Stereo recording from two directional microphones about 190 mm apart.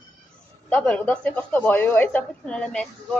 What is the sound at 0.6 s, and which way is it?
Speech, 5° left (ahead or behind).